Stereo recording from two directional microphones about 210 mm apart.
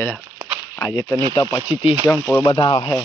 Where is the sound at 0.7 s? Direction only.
15° left (ahead or behind).